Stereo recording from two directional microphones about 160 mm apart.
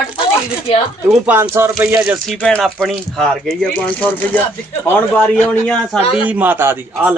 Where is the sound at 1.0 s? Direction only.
5° right (ahead or behind).